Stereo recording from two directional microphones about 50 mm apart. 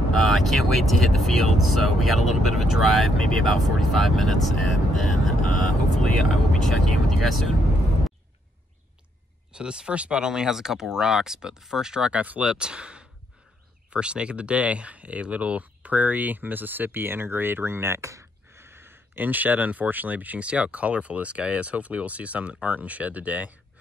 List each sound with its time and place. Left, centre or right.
0.1 s speech: centre
9.5 s speech: centre
12.1 s speech: right